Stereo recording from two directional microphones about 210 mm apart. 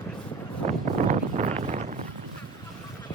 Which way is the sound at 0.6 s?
35° right (ahead or behind).